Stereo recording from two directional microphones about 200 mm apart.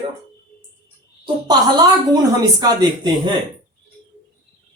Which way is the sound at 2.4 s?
20° right (ahead or behind).